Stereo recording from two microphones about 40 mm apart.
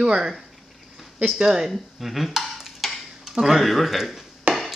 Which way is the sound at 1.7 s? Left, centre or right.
Centre.